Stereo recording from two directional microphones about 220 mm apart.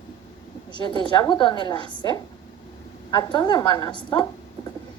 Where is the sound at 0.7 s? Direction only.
20° left (ahead or behind).